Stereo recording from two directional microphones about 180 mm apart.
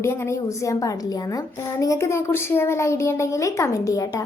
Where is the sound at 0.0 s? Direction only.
15° left (ahead or behind).